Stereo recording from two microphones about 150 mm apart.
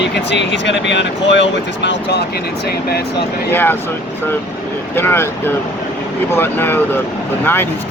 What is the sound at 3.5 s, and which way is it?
Speech, 15° left (ahead or behind).